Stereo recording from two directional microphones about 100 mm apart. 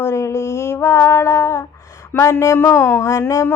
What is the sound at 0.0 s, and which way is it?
Female singing, 30° left (ahead or behind).